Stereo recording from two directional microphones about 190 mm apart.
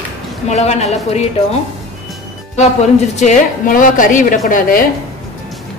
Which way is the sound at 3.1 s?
45° left (ahead or behind).